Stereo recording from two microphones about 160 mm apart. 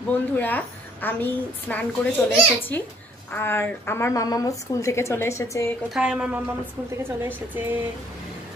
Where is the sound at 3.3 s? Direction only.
15° left (ahead or behind).